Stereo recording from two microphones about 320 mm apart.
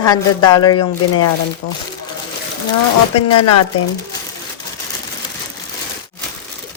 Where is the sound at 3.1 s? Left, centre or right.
Left.